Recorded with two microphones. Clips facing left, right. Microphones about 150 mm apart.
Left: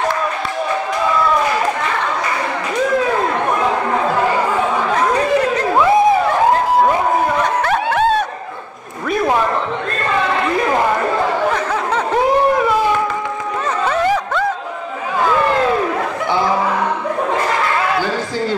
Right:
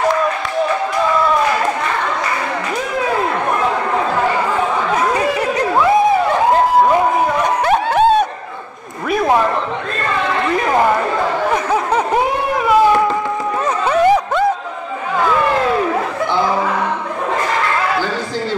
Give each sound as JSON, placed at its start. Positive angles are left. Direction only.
{"t": 7.4, "sound": "a sound", "side_deg": -15}
{"t": 11.5, "sound": "snicker", "side_deg": -15}
{"t": 13.8, "sound": "snicker", "side_deg": -15}